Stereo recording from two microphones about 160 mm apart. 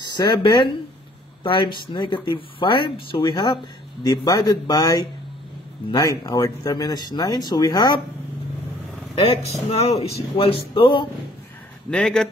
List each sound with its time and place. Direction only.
0.0 s speech: 30° left (ahead or behind)
9.1 s speech: 40° left (ahead or behind)
11.9 s speech: 5° left (ahead or behind)